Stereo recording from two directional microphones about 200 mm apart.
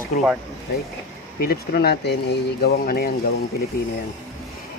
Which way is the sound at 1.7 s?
55° left (ahead or behind).